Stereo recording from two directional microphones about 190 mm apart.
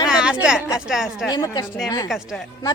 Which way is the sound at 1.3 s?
20° left (ahead or behind).